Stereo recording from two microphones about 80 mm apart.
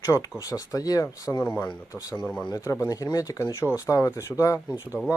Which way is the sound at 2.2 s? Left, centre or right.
Centre.